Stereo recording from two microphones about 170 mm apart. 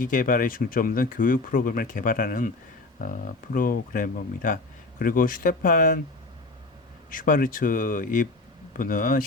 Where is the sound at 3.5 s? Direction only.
55° left (ahead or behind).